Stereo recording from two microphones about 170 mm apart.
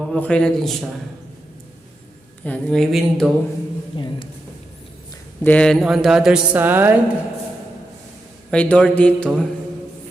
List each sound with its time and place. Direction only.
0.1 s speech: 5° left (ahead or behind)
2.4 s speech: 5° left (ahead or behind)
3.9 s speech: 30° left (ahead or behind)
5.4 s speech: 10° left (ahead or behind); by 6.9 s 10° right (ahead or behind)
8.4 s speech: 5° left (ahead or behind)